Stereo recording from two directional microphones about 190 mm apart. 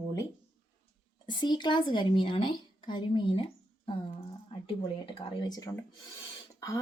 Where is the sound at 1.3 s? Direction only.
25° left (ahead or behind).